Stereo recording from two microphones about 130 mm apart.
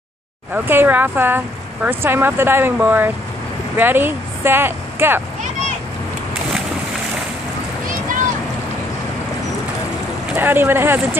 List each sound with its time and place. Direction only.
0.7 s speech: 15° right (ahead or behind)
10.3 s speech: 15° right (ahead or behind)